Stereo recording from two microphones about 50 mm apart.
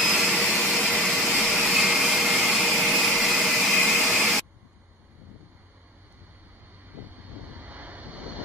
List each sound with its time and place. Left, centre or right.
0.0 s vacuum cleaner: centre
7.5 s vehicle: right